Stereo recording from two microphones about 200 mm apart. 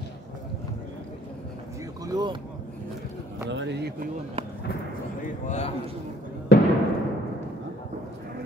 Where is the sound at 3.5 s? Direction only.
65° right (ahead or behind).